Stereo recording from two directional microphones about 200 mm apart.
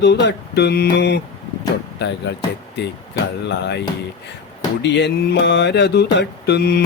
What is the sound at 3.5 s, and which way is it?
Mantra, 60° left (ahead or behind).